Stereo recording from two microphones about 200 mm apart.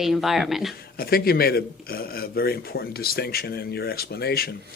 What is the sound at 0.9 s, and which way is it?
Speech, 50° left (ahead or behind).